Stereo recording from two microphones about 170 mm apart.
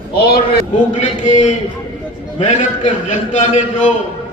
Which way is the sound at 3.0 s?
45° left (ahead or behind).